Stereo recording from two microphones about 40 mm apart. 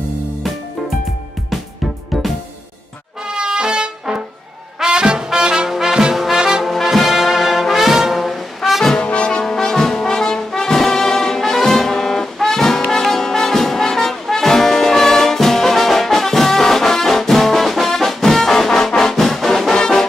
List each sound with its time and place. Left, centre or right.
3.3 s trumpet: right
4.8 s music: right
5.7 s brass instrument: centre
6.1 s music: centre
6.6 s brass instrument: centre
8.9 s brass instrument: left; by 19.7 s centre